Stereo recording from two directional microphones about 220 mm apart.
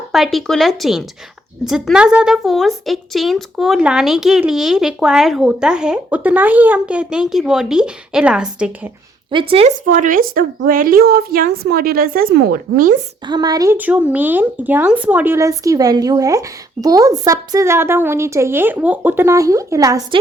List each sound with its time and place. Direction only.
0.1 s a woman's voice: centre (ahead or behind)
9.3 s speech: 25° right (ahead or behind)
9.8 s a woman's voice: 35° right (ahead or behind)
13.2 s speech: 20° right (ahead or behind)